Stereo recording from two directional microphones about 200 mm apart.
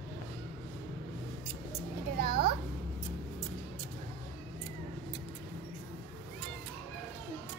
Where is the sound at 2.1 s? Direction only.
50° right (ahead or behind).